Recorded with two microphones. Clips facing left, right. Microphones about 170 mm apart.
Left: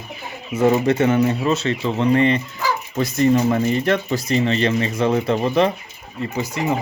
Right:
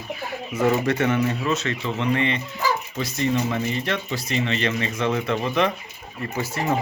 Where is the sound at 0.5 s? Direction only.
25° left (ahead or behind).